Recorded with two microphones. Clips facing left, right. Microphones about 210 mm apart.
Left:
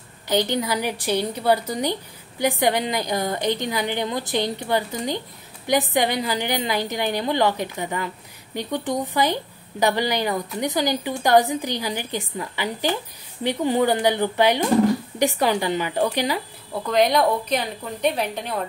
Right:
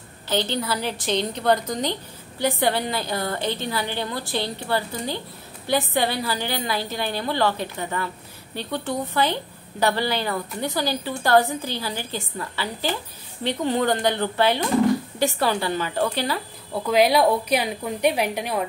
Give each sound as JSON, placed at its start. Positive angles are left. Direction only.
{"t": 0.3, "sound": "a woman's voice", "side_deg": 15}
{"t": 16.7, "sound": "a woman's voice", "side_deg": -5}